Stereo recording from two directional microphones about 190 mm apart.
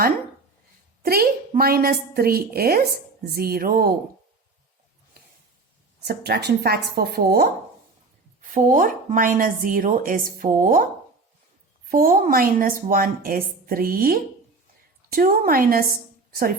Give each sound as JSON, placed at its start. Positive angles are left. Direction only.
{"t": 1.0, "sound": "a woman's voice", "side_deg": -50}
{"t": 6.1, "sound": "speech", "side_deg": -60}
{"t": 8.4, "sound": "a woman's voice", "side_deg": -45}
{"t": 11.9, "sound": "a woman's voice", "side_deg": -45}